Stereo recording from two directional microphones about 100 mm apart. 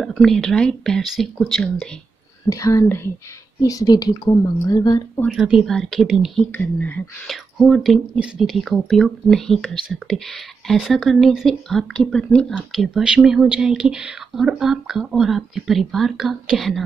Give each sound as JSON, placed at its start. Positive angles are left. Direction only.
{"t": 0.0, "sound": "speech", "side_deg": 0}
{"t": 2.5, "sound": "a woman's voice", "side_deg": 30}
{"t": 3.6, "sound": "a woman's voice", "side_deg": 40}
{"t": 5.3, "sound": "speech", "side_deg": -5}
{"t": 6.4, "sound": "speech", "side_deg": 15}
{"t": 7.2, "sound": "speech", "side_deg": 0}
{"t": 12.7, "sound": "speech", "side_deg": 0}